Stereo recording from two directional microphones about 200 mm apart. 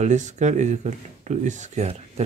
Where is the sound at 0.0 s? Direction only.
35° right (ahead or behind).